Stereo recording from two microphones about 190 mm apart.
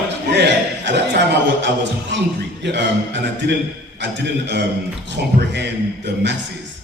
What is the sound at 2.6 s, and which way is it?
A man's voice, 65° right (ahead or behind).